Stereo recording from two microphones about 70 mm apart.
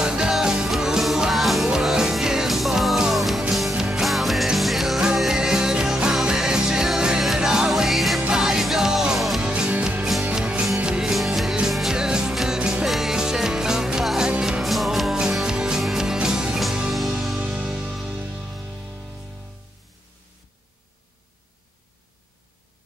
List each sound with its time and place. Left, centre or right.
0.0 s music: centre
9.4 s music: centre
18.2 s music: centre